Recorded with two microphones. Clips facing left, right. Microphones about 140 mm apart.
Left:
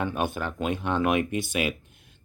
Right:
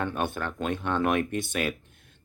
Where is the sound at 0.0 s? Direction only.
10° left (ahead or behind).